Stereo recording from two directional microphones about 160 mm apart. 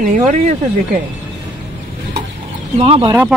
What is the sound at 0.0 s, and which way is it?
Speech, 55° right (ahead or behind).